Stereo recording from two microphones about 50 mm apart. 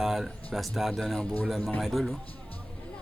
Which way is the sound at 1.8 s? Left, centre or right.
Centre.